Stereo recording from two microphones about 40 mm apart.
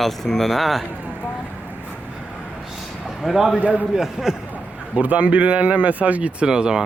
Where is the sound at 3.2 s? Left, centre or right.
Centre.